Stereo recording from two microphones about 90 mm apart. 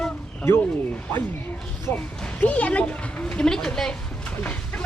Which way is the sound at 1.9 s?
25° left (ahead or behind).